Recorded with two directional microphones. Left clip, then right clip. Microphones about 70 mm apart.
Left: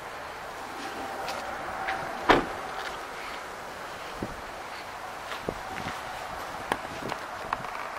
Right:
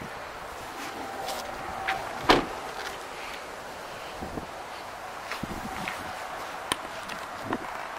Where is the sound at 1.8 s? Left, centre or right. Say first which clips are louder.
Even; right.